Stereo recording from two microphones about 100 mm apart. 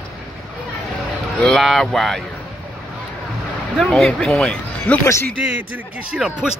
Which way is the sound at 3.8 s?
5° left (ahead or behind).